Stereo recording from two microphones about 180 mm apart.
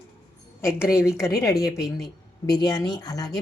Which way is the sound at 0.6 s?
15° left (ahead or behind).